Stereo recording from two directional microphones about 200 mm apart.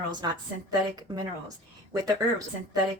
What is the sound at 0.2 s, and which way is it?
Speech, 20° right (ahead or behind).